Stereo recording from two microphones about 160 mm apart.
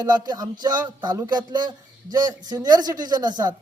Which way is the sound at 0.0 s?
25° right (ahead or behind).